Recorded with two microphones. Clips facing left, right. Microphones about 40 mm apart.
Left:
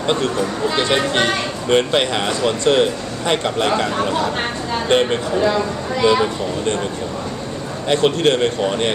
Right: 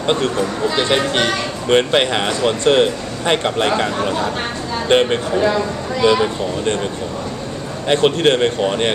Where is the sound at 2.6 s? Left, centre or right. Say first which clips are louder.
Right 2 dB; right.